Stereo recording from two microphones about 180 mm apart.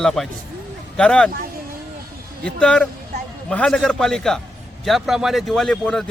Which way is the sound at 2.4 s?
5° left (ahead or behind).